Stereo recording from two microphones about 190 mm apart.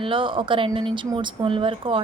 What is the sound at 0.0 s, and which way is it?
Speech, 25° right (ahead or behind).